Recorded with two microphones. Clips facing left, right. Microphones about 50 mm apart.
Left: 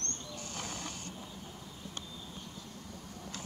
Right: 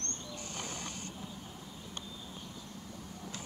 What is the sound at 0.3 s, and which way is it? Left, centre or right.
Wild animals, centre.